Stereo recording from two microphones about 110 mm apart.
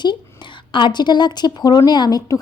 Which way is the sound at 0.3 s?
45° left (ahead or behind).